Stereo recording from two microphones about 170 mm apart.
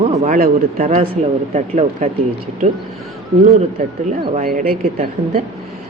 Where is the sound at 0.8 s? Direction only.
45° right (ahead or behind).